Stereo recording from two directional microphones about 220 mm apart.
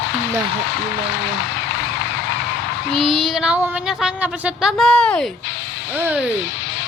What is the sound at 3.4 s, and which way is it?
A woman's voice, centre (ahead or behind).